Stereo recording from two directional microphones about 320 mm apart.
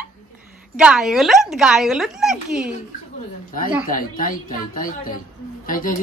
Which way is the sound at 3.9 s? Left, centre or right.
Left.